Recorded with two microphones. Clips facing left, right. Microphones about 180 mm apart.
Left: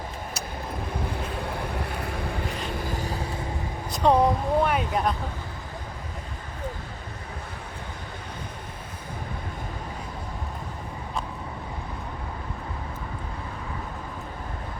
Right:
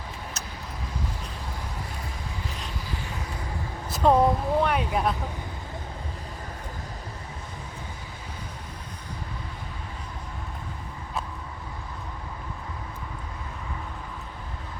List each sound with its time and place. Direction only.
0.9 s vehicle: 60° left (ahead or behind)
2.7 s music: 50° left (ahead or behind)
3.9 s speech: 5° right (ahead or behind)